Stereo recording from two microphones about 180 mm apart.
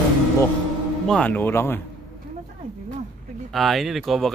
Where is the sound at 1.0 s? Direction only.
5° left (ahead or behind).